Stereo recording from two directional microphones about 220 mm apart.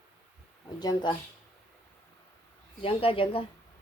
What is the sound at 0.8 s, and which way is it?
Speech, 20° left (ahead or behind).